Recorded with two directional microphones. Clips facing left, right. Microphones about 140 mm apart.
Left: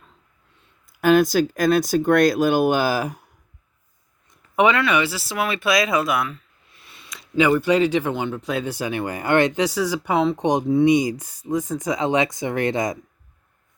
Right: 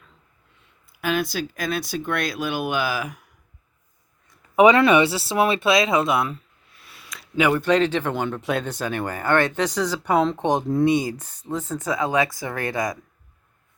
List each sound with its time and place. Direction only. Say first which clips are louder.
0.9 s speech: left 8 dB; 45° left (ahead or behind)
4.9 s speech: right 4 dB; 25° right (ahead or behind)
6.3 s a sound: right 4 dB; 5° right (ahead or behind)
7.6 s speech: left 1 dB; 10° left (ahead or behind)
8.6 s speech: left 1 dB; 10° left (ahead or behind)